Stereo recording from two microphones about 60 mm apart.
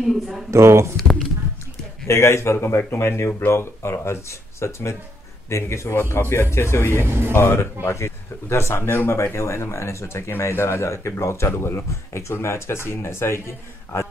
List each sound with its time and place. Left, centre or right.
0.0 s speech: centre
0.5 s speech: right
0.9 s a sound: centre
2.0 s speech: left
6.9 s speech: right
7.3 s speech: left